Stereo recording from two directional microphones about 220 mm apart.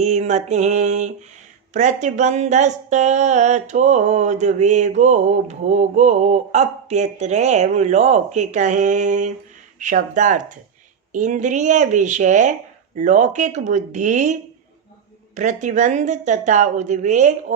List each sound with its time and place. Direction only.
0.0 s speech: 30° right (ahead or behind)
15.4 s speech: 35° right (ahead or behind)